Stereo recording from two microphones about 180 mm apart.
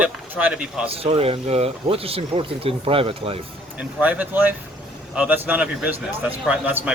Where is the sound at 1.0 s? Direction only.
30° right (ahead or behind).